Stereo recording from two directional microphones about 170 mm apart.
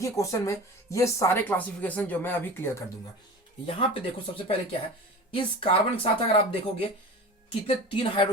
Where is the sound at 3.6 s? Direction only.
30° left (ahead or behind).